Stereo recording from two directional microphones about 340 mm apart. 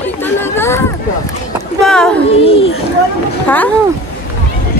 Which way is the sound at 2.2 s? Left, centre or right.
Centre.